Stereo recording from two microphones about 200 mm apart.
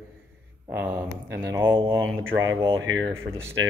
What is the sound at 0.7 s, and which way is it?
Speech, 5° right (ahead or behind).